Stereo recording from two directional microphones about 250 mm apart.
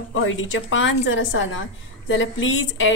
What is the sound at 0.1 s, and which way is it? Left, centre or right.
A woman's voice, left.